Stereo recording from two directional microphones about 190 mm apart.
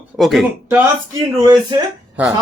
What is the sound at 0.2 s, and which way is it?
Speech, centre (ahead or behind).